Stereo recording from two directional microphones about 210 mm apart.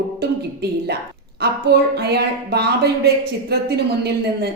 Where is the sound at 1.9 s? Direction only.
50° right (ahead or behind).